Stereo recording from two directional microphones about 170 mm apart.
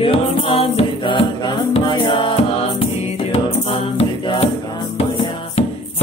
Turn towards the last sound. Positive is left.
turn(degrees=35)  # may be behind; listen again after turning